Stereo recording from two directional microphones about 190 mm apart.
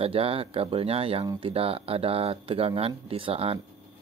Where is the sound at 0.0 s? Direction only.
30° right (ahead or behind).